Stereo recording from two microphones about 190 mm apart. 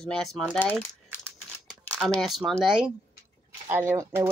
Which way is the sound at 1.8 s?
5° left (ahead or behind).